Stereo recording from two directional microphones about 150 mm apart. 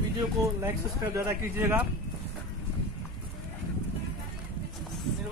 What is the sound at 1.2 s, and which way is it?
Speech, 15° right (ahead or behind).